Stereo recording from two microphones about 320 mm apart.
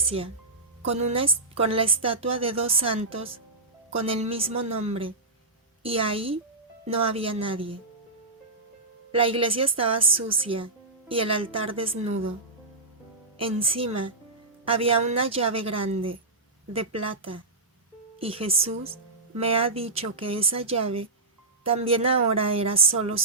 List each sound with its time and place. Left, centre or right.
0.0 s a woman's voice: centre
9.1 s a woman's voice: centre
12.0 s speech: right
13.4 s a woman's voice: centre